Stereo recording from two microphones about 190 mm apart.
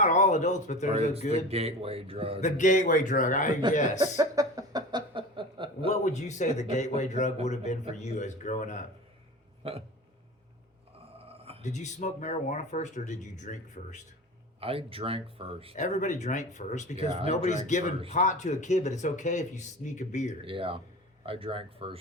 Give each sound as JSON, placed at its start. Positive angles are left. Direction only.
{"t": 0.0, "sound": "speech", "side_deg": 40}
{"t": 0.9, "sound": "speech", "side_deg": -30}
{"t": 2.4, "sound": "speech", "side_deg": 40}
{"t": 4.0, "sound": "a sound", "side_deg": -20}
{"t": 5.9, "sound": "speech", "side_deg": 40}
{"t": 9.6, "sound": "speech", "side_deg": -30}
{"t": 11.6, "sound": "speech", "side_deg": 40}
{"t": 14.6, "sound": "speech", "side_deg": -30}
{"t": 15.7, "sound": "speech", "side_deg": 40}
{"t": 20.4, "sound": "speech", "side_deg": -30}